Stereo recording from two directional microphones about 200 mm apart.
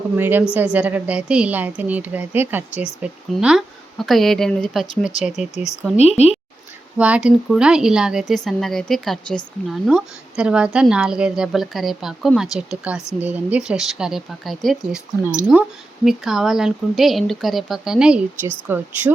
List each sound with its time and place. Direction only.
0.2 s a woman's voice: 10° right (ahead or behind)
6.0 s a woman's voice: 30° left (ahead or behind)
7.0 s a woman's voice: 5° right (ahead or behind)